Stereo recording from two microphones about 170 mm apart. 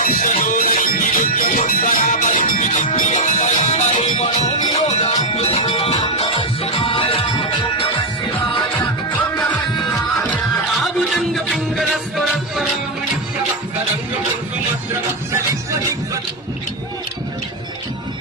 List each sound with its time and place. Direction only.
0.0 s music: 50° left (ahead or behind); by 7.3 s 35° left (ahead or behind)
10.8 s music: centre (ahead or behind)